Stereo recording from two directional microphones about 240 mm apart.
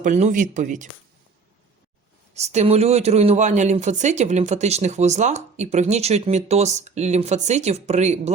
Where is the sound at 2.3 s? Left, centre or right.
Right.